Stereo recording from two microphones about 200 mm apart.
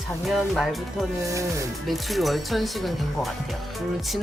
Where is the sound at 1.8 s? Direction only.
Centre (ahead or behind).